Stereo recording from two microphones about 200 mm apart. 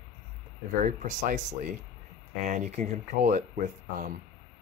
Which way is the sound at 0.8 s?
40° right (ahead or behind).